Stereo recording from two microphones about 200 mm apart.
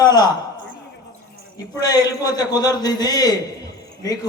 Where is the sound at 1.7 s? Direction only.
20° left (ahead or behind).